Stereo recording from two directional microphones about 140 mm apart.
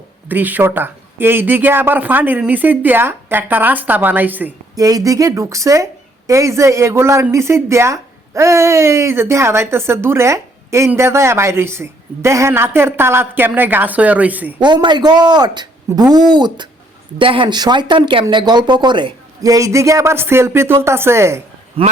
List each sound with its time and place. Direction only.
0.3 s speech: 10° right (ahead or behind)
4.7 s speech: 25° right (ahead or behind)
14.6 s speech: 35° right (ahead or behind)
21.8 s speech: 40° right (ahead or behind)